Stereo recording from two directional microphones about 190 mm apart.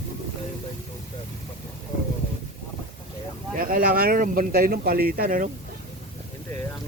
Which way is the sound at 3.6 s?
50° right (ahead or behind).